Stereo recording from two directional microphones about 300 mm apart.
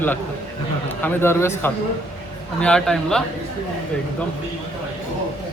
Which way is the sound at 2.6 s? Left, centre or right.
Centre.